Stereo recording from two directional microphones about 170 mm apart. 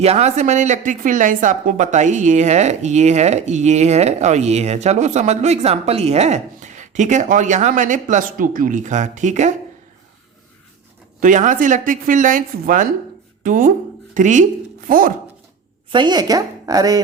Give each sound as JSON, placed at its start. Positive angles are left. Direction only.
{"t": 0.0, "sound": "speech", "side_deg": -40}
{"t": 11.2, "sound": "speech", "side_deg": -50}
{"t": 15.9, "sound": "a woman's voice", "side_deg": -25}